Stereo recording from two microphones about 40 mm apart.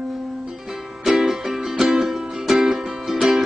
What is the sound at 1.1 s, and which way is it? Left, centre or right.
Music, centre.